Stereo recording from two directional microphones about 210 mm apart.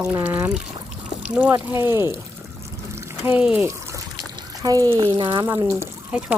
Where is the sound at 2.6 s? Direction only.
15° right (ahead or behind).